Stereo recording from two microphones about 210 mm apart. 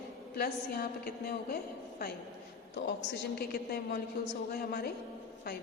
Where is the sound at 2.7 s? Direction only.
50° left (ahead or behind).